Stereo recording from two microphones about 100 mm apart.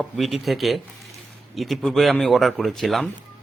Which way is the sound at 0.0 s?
Centre (ahead or behind).